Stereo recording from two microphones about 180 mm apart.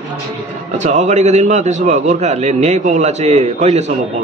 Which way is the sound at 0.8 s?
40° right (ahead or behind).